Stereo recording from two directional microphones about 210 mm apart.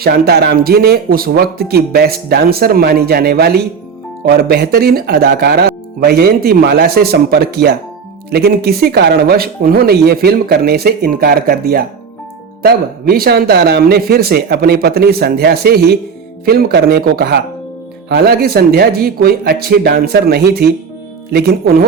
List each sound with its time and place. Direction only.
0.0 s speech: 50° right (ahead or behind)